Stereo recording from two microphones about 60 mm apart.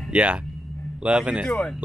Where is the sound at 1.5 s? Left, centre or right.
Centre.